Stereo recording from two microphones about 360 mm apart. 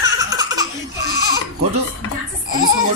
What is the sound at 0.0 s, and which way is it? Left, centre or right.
Laughter, centre.